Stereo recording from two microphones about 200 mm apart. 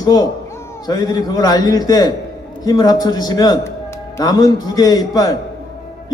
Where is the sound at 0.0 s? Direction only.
20° left (ahead or behind).